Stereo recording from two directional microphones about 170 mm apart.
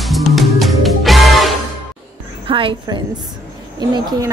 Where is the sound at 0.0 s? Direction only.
Centre (ahead or behind).